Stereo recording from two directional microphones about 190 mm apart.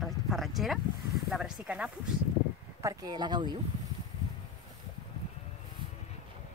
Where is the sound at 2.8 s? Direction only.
15° right (ahead or behind).